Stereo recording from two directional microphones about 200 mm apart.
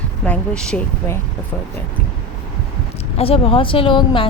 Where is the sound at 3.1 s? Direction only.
30° left (ahead or behind).